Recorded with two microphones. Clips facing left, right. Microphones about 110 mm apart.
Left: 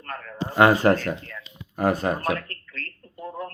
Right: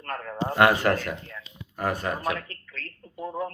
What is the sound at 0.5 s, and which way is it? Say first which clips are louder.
Speech: left 3 dB; 25° left (ahead or behind).